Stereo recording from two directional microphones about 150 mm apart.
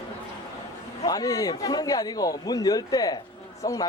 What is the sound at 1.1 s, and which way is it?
A man's voice, 25° left (ahead or behind).